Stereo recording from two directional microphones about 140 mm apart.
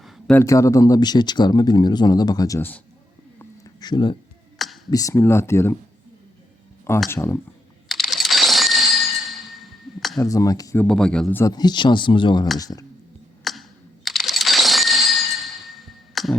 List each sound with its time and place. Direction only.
0.3 s speech: 25° left (ahead or behind)
2.6 s a man's voice: 15° left (ahead or behind)
3.3 s cat: 25° left (ahead or behind)
4.5 s a sound: centre (ahead or behind)
4.9 s speech: 25° left (ahead or behind)
7.1 s speech: 20° left (ahead or behind)
7.9 s crack: centre (ahead or behind)
10.2 s speech: 25° left (ahead or behind)
10.8 s speech: 5° left (ahead or behind)
11.4 s speech: 30° left (ahead or behind)
13.4 s camera: centre (ahead or behind)